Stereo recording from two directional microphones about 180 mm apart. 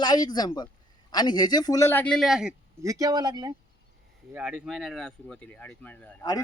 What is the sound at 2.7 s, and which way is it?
Speech, 15° right (ahead or behind).